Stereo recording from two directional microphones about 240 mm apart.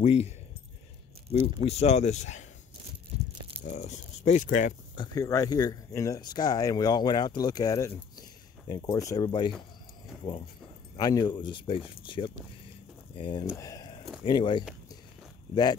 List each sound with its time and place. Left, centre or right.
0.0 s speech: left
1.3 s speech: left
3.1 s a sound: right
3.6 s speech: left
5.0 s speech: centre
11.0 s speech: centre
13.6 s a sound: centre
14.2 s speech: centre